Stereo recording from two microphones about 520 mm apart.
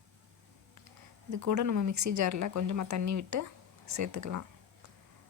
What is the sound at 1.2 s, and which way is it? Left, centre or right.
A woman's voice, right.